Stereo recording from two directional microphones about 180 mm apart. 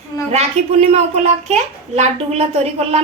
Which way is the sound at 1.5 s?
35° right (ahead or behind).